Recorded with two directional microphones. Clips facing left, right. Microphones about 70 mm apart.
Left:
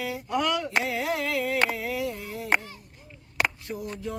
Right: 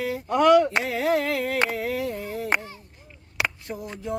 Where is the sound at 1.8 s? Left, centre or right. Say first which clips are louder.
Right 3 dB; right.